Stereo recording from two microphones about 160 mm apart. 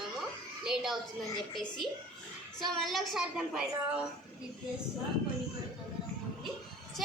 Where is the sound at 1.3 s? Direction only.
25° left (ahead or behind).